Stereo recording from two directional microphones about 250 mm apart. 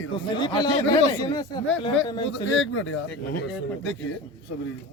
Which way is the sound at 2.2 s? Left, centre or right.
Left.